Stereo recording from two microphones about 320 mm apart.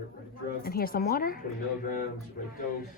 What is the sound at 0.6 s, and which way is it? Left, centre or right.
Speech, left.